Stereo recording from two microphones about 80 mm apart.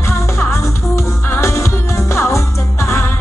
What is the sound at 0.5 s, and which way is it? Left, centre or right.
Music, left.